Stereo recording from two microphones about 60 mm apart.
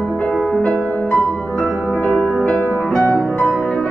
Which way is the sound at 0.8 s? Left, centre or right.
Left.